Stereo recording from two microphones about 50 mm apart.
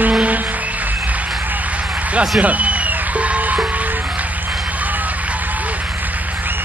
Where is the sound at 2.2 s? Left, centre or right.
Right.